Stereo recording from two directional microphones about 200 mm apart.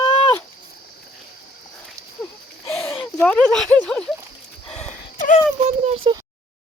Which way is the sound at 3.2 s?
5° left (ahead or behind).